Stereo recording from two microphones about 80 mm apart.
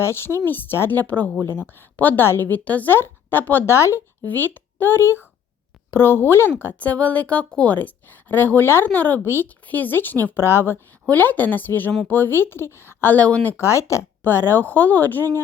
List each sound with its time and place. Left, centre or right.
0.0 s a woman's voice: left
3.8 s speech: left
4.3 s a child's voice: left
13.6 s speech: left
14.3 s a woman's voice: left